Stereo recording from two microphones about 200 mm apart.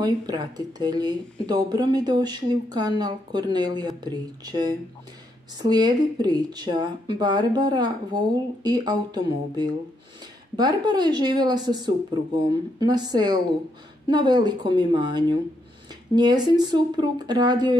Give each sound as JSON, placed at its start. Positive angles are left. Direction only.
{"t": 0.0, "sound": "speech", "side_deg": -20}